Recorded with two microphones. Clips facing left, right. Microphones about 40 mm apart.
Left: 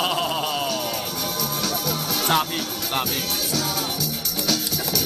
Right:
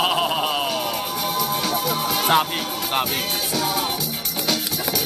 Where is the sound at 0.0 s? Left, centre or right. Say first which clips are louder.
Right 3 dB; centre.